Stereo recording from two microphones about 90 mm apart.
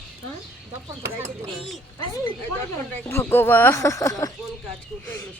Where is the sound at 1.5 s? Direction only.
Centre (ahead or behind).